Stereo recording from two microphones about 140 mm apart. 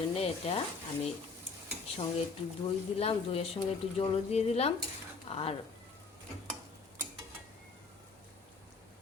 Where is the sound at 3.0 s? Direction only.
45° left (ahead or behind).